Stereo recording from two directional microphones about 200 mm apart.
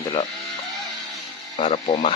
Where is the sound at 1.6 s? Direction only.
30° left (ahead or behind).